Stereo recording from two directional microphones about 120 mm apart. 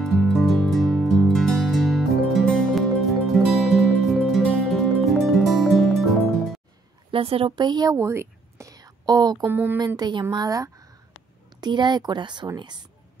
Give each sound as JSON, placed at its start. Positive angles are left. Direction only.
{"t": 0.0, "sound": "music", "side_deg": 0}
{"t": 7.1, "sound": "speech", "side_deg": -50}
{"t": 9.5, "sound": "a sound", "side_deg": -15}
{"t": 9.9, "sound": "speech", "side_deg": -35}